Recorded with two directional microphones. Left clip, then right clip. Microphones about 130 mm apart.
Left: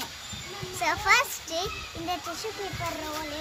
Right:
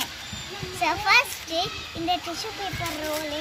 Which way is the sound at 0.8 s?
25° left (ahead or behind).